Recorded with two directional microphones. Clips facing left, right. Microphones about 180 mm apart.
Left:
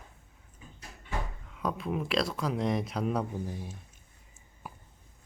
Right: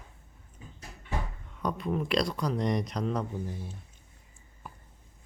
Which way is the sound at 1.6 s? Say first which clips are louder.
Right 1 dB; centre (ahead or behind).